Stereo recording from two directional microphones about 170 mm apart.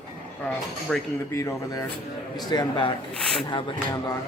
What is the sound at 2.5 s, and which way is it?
Speech, 25° left (ahead or behind).